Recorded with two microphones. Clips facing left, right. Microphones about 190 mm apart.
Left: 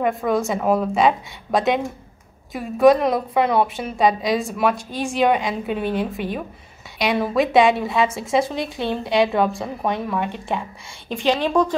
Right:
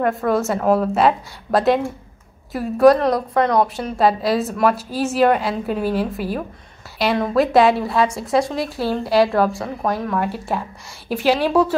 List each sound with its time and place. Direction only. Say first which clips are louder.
0.0 s a woman's voice: right 2 dB; centre (ahead or behind)